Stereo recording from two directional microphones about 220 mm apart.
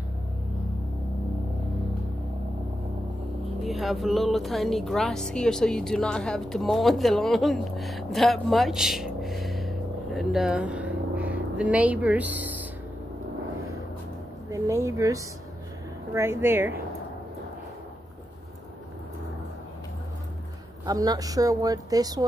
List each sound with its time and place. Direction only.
3.6 s speech: centre (ahead or behind)
14.5 s a woman's voice: 15° right (ahead or behind)
20.8 s a woman's voice: 15° right (ahead or behind)